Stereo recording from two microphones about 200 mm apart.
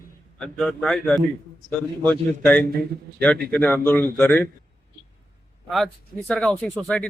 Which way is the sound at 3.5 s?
10° left (ahead or behind).